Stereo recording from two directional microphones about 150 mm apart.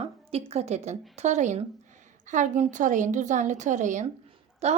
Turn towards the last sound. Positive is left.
turn(degrees=-45)  # may be behind; listen again after turning